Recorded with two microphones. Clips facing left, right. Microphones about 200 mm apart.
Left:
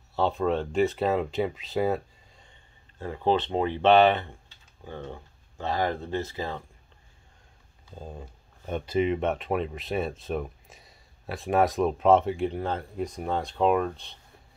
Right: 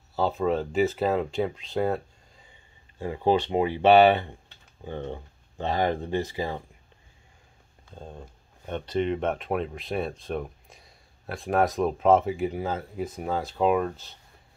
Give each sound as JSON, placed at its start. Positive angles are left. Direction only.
{"t": 0.1, "sound": "speech", "side_deg": 0}
{"t": 3.0, "sound": "speech", "side_deg": -10}
{"t": 7.9, "sound": "speech", "side_deg": 5}